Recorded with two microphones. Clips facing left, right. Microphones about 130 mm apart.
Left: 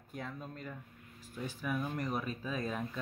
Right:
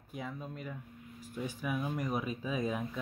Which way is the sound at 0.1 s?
5° right (ahead or behind).